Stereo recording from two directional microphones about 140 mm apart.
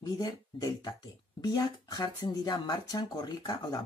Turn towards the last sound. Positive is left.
turn(degrees=30)  # may be behind; listen again after turning